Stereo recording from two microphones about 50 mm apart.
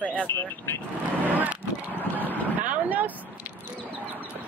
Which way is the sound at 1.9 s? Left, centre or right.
Left.